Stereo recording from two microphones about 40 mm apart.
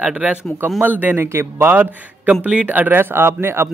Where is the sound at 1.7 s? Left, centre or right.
Right.